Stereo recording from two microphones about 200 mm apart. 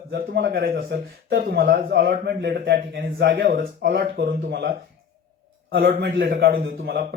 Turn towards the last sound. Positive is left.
turn(degrees=-50)  # may be behind; listen again after turning